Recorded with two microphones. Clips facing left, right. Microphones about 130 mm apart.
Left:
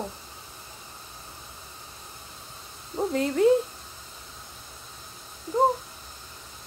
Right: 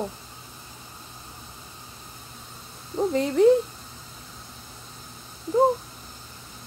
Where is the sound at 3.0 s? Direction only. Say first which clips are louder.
Right 3 dB; centre (ahead or behind).